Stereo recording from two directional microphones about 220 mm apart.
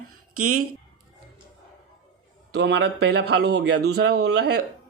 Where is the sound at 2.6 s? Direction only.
50° right (ahead or behind).